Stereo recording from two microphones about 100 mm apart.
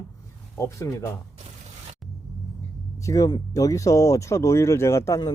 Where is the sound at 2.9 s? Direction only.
35° left (ahead or behind).